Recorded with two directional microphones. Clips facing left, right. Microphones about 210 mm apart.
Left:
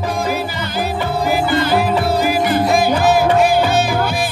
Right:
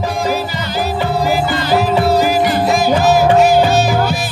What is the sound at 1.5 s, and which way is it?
Music, 55° left (ahead or behind).